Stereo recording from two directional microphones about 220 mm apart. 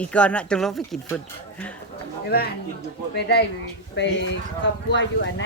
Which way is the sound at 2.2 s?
45° left (ahead or behind).